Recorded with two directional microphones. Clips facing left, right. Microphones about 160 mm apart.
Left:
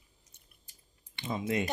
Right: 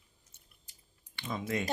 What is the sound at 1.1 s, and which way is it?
Speech, 20° left (ahead or behind).